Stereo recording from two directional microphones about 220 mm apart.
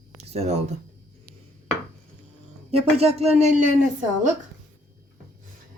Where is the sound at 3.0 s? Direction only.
30° right (ahead or behind).